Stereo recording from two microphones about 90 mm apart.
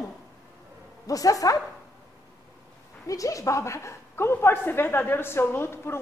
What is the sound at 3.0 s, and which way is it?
A woman's voice, 40° left (ahead or behind).